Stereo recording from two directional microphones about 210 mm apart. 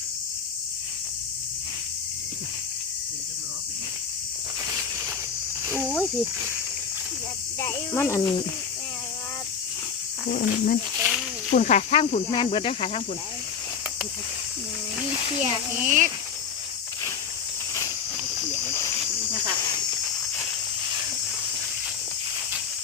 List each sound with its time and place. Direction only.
5.8 s speech: 5° right (ahead or behind)
7.6 s speech: 10° left (ahead or behind)
10.2 s speech: 45° left (ahead or behind); by 13.0 s 25° left (ahead or behind)
15.4 s speech: 30° right (ahead or behind)